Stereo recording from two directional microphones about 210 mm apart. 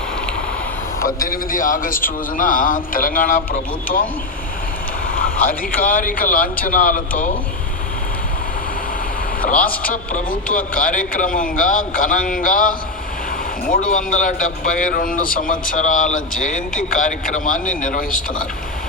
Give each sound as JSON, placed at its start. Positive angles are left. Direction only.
{"t": 0.9, "sound": "a man's voice", "side_deg": 45}
{"t": 9.4, "sound": "a man's voice", "side_deg": 40}